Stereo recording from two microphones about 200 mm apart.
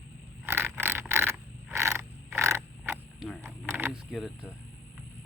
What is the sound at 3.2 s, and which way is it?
Wild animals, centre (ahead or behind).